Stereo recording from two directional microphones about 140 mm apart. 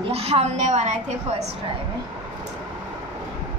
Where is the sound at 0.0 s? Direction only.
45° right (ahead or behind).